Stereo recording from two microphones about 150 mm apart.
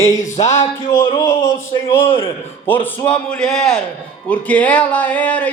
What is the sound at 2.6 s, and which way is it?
A man's voice, 15° left (ahead or behind).